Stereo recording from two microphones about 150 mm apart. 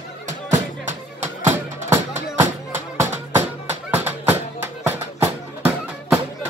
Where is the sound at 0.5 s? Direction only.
55° right (ahead or behind).